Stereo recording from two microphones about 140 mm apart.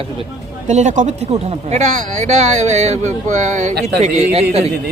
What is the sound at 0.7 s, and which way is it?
Speech, 55° right (ahead or behind).